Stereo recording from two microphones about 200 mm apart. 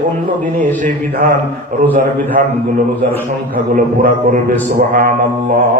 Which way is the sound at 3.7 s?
45° right (ahead or behind).